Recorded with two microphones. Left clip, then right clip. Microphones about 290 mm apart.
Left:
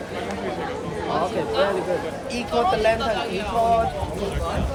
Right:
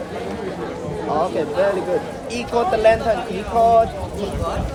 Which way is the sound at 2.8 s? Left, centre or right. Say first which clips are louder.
Right 10 dB; right.